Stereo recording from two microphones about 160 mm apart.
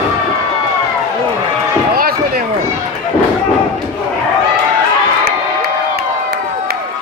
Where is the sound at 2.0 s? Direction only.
65° right (ahead or behind).